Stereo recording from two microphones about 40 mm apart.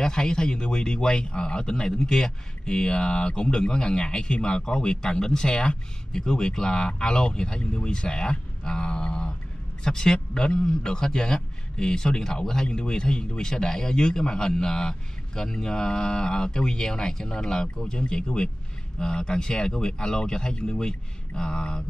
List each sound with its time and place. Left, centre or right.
0.0 s a man's voice: centre